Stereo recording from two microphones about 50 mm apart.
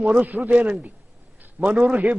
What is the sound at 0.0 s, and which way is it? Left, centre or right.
A man's voice, right.